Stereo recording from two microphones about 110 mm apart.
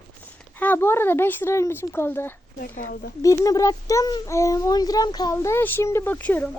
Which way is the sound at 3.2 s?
30° left (ahead or behind).